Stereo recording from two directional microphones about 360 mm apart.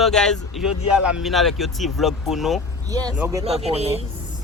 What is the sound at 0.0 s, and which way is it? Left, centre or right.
Speech, centre.